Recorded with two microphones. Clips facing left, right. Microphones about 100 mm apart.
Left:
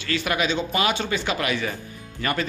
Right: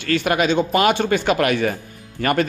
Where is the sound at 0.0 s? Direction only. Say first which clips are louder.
Right 6 dB; 50° right (ahead or behind).